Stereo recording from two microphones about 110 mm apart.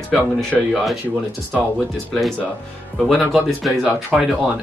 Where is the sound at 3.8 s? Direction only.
10° right (ahead or behind).